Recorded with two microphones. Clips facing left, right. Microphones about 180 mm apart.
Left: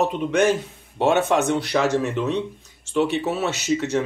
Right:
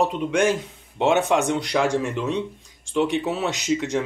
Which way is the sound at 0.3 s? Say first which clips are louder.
Left 2 dB; 10° right (ahead or behind).